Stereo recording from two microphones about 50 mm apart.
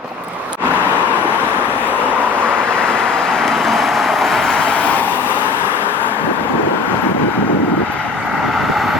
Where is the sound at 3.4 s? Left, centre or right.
Centre.